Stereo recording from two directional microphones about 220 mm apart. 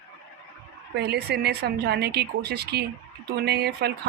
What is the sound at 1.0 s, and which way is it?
Speech, 50° right (ahead or behind).